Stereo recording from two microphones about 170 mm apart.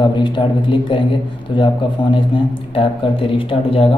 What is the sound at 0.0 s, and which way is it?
Speech, 25° left (ahead or behind).